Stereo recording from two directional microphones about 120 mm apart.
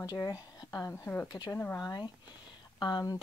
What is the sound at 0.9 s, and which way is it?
Speech, 15° left (ahead or behind).